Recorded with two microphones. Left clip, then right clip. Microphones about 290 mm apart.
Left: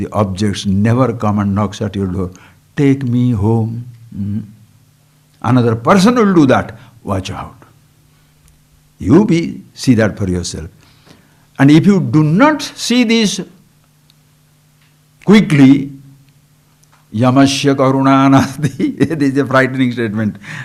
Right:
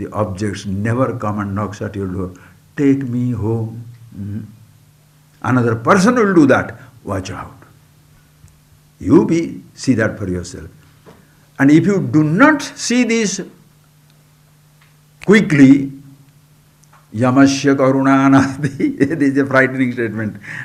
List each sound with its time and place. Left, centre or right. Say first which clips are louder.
0.0 s speech: left 4 dB; left
5.4 s speech: left 3 dB; left
9.0 s speech: left 1 dB; left
15.2 s speech: left 1 dB; left
17.2 s speech: left 1 dB; left